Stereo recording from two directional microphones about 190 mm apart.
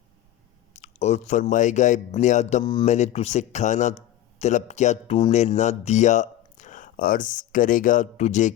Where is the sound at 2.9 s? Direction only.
35° left (ahead or behind).